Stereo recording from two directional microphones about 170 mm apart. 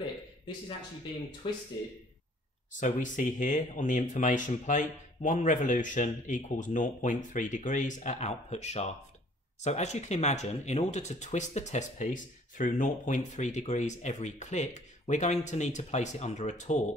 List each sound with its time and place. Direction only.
1.4 s speech: 30° left (ahead or behind)
2.8 s speech: 50° left (ahead or behind)